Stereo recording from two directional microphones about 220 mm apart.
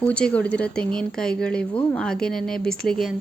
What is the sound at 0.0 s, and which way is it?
Speech, 5° left (ahead or behind).